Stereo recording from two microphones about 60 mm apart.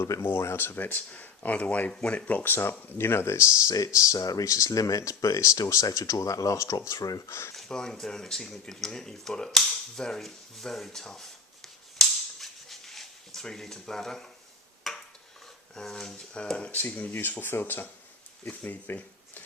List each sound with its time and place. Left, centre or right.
0.2 s speech: left
1.9 s speech: centre
2.1 s speech: left
7.3 s speech: left
7.5 s speech: centre
11.9 s cap gun: centre
14.8 s a sound: centre
15.7 s speech: centre
16.7 s speech: left